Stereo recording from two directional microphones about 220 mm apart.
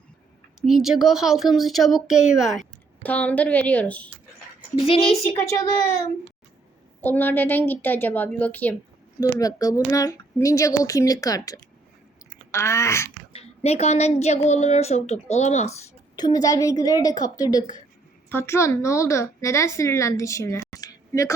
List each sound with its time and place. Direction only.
0.6 s a woman's voice: centre (ahead or behind)
4.8 s a woman's voice: 25° left (ahead or behind)
7.0 s speech: 10° left (ahead or behind)
13.3 s a woman's voice: 30° left (ahead or behind)
16.1 s speech: 20° left (ahead or behind)